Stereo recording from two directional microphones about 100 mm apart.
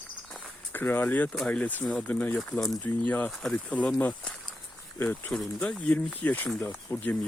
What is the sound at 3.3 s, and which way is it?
Speech, centre (ahead or behind).